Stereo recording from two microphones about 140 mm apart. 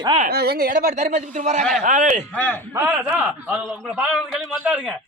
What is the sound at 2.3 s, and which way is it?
Speech, 10° left (ahead or behind).